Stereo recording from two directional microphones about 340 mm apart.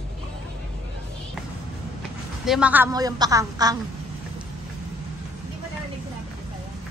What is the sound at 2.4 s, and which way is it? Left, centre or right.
A woman's voice, centre.